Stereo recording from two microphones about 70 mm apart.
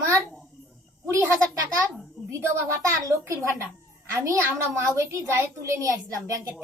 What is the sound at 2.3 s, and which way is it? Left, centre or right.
A child's voice, right.